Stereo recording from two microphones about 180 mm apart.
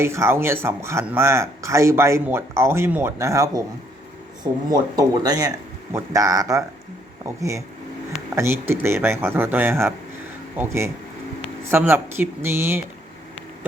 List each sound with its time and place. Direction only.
0.0 s speech: 15° right (ahead or behind)
4.7 s speech: 20° right (ahead or behind)